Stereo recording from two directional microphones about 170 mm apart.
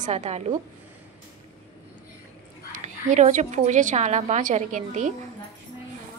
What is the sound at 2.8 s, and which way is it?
A woman's voice, 45° right (ahead or behind).